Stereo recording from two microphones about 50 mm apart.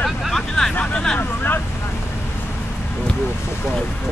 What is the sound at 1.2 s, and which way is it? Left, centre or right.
Speech, left.